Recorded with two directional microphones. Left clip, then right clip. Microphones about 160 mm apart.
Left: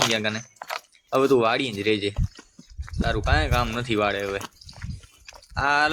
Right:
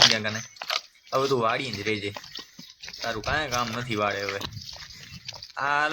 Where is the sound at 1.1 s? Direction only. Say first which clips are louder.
Left 5 dB; 30° left (ahead or behind).